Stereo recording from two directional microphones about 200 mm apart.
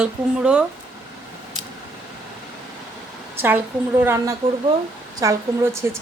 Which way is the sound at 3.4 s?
10° right (ahead or behind).